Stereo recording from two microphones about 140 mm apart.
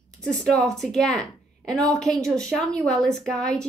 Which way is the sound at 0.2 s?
5° left (ahead or behind).